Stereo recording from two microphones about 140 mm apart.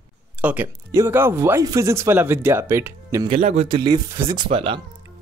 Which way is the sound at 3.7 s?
35° right (ahead or behind).